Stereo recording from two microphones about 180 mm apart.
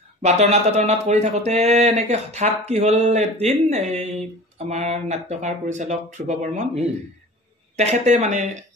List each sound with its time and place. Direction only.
0.2 s speech: 40° right (ahead or behind)